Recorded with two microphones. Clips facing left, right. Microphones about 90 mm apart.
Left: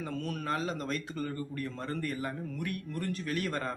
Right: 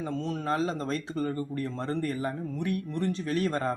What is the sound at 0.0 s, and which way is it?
Speech, 25° right (ahead or behind).